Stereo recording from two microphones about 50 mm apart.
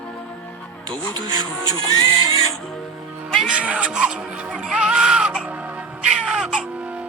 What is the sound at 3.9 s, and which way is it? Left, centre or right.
Music, centre.